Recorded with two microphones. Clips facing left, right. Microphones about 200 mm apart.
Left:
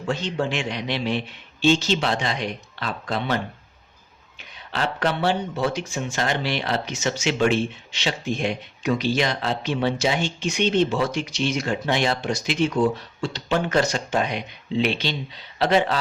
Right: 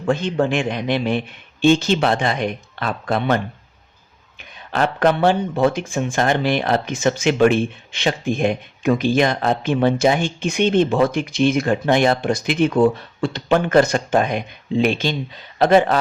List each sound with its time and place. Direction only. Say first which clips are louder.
0.1 s speech: right 6 dB; 55° right (ahead or behind)